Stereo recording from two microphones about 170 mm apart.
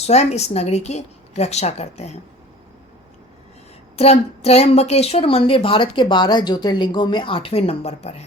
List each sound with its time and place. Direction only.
0.0 s a woman's voice: 40° left (ahead or behind)
3.9 s a woman's voice: 35° left (ahead or behind)